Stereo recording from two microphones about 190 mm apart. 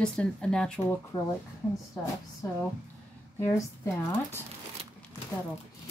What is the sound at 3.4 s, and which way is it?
Speech, 15° left (ahead or behind).